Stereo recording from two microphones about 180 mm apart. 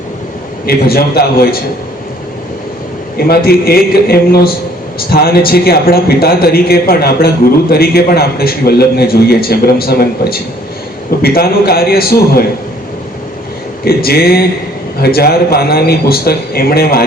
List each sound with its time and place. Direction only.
0.6 s a man's voice: 60° left (ahead or behind)
3.2 s a man's voice: 60° left (ahead or behind)
13.8 s a man's voice: 60° left (ahead or behind)